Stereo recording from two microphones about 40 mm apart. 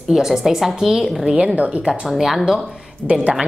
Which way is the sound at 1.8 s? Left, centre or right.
Centre.